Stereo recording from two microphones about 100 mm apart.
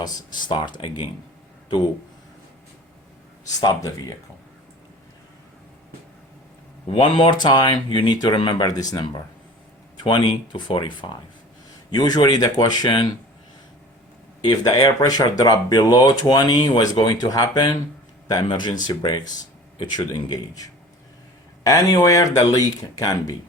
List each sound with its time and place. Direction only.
0.0 s speech: 40° left (ahead or behind)
3.6 s speech: 35° left (ahead or behind)
6.9 s speech: 60° left (ahead or behind)
11.9 s speech: 45° left (ahead or behind)
14.4 s speech: 40° left (ahead or behind)